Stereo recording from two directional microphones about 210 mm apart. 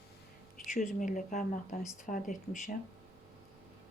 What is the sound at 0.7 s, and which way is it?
Speech, 35° left (ahead or behind).